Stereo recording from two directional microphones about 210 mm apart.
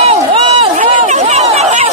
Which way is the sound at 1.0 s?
35° right (ahead or behind).